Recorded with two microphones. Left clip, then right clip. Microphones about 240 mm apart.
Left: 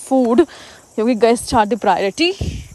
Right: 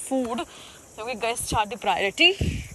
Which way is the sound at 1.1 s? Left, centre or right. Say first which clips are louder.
Left 11 dB; left.